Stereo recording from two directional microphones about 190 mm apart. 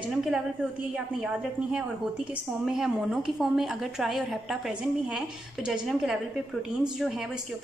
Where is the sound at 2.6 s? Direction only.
5° right (ahead or behind).